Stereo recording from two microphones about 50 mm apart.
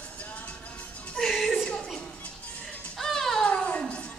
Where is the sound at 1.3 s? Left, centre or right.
Centre.